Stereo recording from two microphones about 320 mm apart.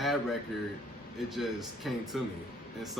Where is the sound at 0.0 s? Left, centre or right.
Centre.